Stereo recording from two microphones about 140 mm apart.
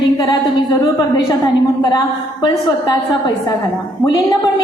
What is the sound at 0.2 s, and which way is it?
A woman's voice, 25° left (ahead or behind).